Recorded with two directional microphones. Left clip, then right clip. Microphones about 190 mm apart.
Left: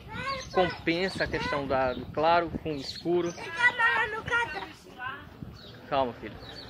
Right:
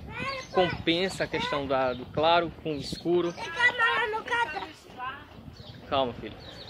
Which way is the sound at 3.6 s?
40° right (ahead or behind).